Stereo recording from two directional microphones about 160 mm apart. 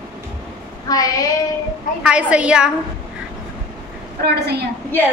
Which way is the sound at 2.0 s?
5° right (ahead or behind).